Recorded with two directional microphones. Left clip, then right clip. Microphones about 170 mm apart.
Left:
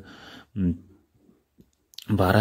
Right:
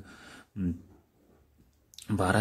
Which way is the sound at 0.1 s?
25° left (ahead or behind).